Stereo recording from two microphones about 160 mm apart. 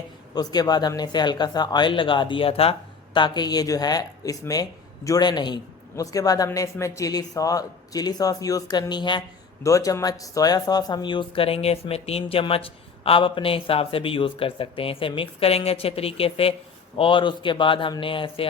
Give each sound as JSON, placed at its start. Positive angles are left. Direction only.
{"t": 0.3, "sound": "speech", "side_deg": 25}